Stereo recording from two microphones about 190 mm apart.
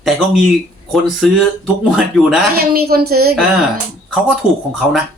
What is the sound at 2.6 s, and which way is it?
Speech, 55° right (ahead or behind).